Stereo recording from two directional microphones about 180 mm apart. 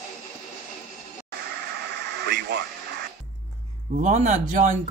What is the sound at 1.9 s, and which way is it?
Radio, 70° right (ahead or behind).